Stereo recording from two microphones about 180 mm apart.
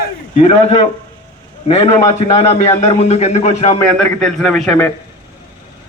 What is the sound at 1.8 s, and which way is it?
A man's voice, 40° left (ahead or behind).